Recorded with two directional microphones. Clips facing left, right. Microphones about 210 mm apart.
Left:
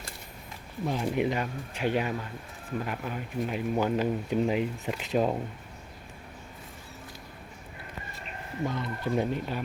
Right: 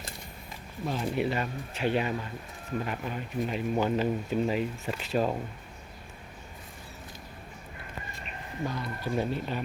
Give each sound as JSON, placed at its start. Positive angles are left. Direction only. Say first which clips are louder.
{"t": 0.9, "sound": "speech", "louder": "left 1 dB", "side_deg": 15}
{"t": 8.6, "sound": "speech", "louder": "left 2 dB", "side_deg": 20}